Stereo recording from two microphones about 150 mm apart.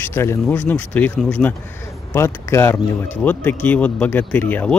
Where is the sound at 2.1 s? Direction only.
20° left (ahead or behind).